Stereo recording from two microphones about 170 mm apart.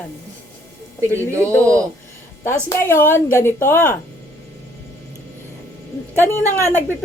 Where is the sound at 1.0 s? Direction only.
15° right (ahead or behind).